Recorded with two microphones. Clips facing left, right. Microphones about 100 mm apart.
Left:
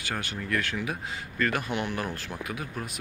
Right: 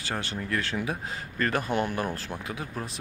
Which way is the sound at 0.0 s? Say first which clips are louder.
Right 1 dB; 30° right (ahead or behind).